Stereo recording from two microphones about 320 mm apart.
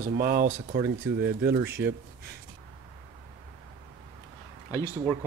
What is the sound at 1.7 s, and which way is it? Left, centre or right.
Speech, right.